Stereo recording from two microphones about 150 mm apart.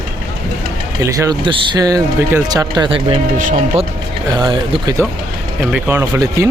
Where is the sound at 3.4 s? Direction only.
60° right (ahead or behind).